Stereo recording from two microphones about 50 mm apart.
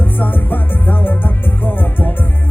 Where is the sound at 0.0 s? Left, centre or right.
Left.